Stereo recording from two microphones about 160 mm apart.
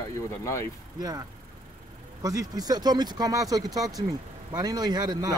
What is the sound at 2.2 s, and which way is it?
Speech, 20° right (ahead or behind).